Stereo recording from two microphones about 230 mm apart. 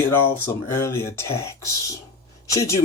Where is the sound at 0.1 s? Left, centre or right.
Centre.